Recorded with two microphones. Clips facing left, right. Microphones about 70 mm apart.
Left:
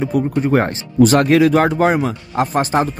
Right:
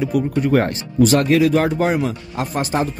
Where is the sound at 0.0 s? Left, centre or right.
Left.